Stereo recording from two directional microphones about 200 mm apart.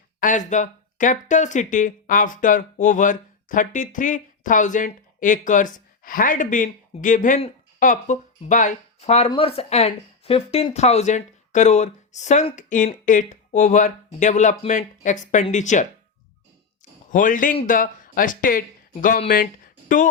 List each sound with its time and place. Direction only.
0.2 s speech: 40° left (ahead or behind)
17.1 s speech: 40° left (ahead or behind)